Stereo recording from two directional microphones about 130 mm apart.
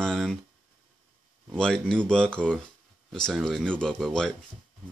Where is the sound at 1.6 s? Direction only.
5° left (ahead or behind).